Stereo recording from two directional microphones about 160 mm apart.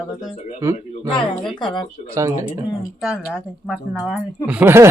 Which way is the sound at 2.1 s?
20° right (ahead or behind).